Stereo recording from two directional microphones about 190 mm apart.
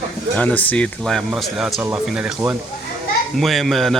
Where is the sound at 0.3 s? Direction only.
10° left (ahead or behind).